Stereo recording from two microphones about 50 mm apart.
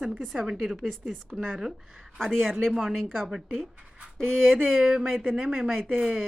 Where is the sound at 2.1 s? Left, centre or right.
Centre.